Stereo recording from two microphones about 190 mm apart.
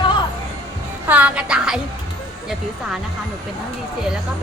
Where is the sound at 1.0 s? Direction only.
10° right (ahead or behind).